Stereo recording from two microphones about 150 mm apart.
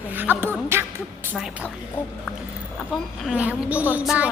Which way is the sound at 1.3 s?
5° right (ahead or behind).